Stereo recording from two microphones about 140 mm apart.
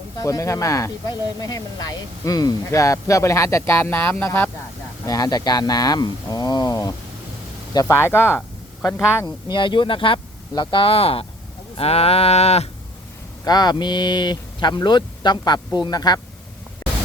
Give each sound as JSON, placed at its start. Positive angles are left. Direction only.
{"t": 0.2, "sound": "speech", "side_deg": 25}
{"t": 5.0, "sound": "speech", "side_deg": 25}
{"t": 9.2, "sound": "speech", "side_deg": 35}
{"t": 11.8, "sound": "a sound", "side_deg": 45}
{"t": 13.4, "sound": "speech", "side_deg": 30}
{"t": 16.8, "sound": "pink noise", "side_deg": 25}